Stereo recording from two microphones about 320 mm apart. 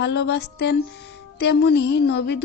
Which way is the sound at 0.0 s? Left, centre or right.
Left.